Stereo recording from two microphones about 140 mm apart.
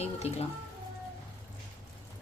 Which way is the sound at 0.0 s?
50° left (ahead or behind).